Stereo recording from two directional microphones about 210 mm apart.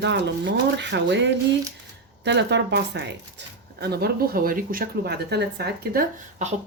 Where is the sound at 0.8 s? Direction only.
55° right (ahead or behind).